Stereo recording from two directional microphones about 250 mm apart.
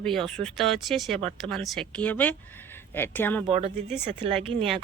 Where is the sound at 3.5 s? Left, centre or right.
Right.